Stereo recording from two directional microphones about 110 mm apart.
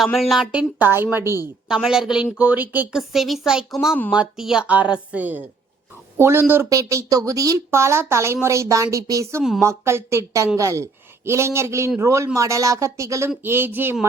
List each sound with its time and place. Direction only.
0.0 s a woman's voice: centre (ahead or behind)
0.8 s a woman's voice: 20° right (ahead or behind)
1.6 s a woman's voice: 5° right (ahead or behind)
2.9 s a woman's voice: 5° right (ahead or behind); by 13.9 s 20° right (ahead or behind)